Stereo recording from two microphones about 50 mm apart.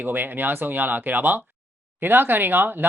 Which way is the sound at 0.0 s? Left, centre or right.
Right.